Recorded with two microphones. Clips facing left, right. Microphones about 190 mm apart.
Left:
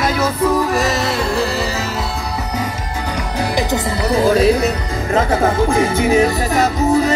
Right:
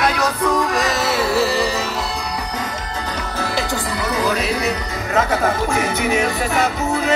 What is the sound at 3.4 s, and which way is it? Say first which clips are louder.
Music: left 5 dB; 20° left (ahead or behind).